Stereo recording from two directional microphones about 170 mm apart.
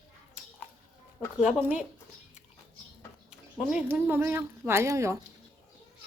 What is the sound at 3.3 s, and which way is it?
Speech, 5° right (ahead or behind).